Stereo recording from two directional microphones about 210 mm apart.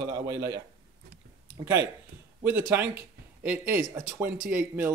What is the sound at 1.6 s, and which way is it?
Speech, 15° right (ahead or behind).